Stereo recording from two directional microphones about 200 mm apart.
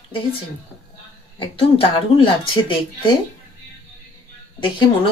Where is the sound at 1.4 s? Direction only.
30° left (ahead or behind).